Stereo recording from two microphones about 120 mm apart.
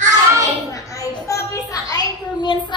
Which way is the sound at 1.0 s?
25° left (ahead or behind).